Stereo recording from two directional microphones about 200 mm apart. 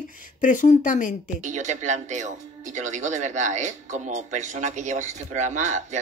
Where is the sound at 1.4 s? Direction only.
35° right (ahead or behind).